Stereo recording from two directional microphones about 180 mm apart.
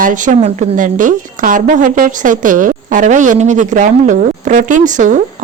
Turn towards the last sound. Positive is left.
turn(degrees=-45)  # may be behind; listen again after turning